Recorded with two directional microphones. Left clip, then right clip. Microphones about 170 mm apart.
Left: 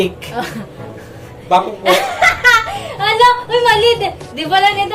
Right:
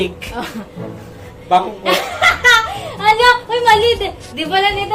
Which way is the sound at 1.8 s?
20° right (ahead or behind).